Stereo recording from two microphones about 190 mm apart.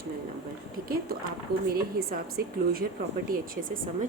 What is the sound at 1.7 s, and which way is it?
A woman's voice, 50° right (ahead or behind).